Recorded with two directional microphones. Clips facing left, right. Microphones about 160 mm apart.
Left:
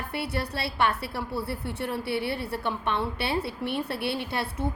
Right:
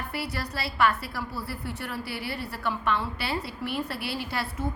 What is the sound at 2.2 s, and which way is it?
Speech, 60° left (ahead or behind).